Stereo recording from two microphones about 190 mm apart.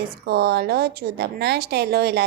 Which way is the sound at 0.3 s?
55° right (ahead or behind).